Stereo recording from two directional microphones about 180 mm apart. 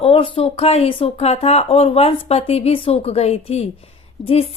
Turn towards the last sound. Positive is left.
turn(degrees=35)  # may be behind; listen again after turning